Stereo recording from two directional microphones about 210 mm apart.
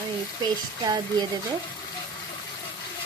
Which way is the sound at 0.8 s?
20° right (ahead or behind).